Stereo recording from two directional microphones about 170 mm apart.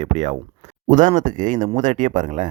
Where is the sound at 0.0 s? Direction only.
40° right (ahead or behind).